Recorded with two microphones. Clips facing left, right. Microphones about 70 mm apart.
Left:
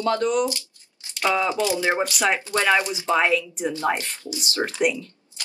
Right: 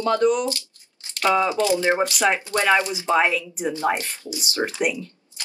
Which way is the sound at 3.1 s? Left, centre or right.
Centre.